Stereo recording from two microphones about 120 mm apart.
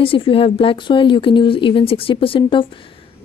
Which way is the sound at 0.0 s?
50° left (ahead or behind).